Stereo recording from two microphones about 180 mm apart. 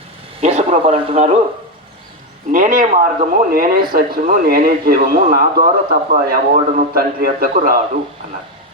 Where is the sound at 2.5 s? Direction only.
50° right (ahead or behind).